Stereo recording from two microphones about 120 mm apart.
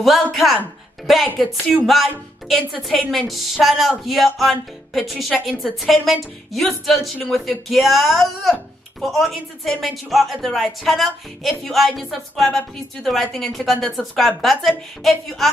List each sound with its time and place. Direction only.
0.0 s a woman's voice: centre (ahead or behind)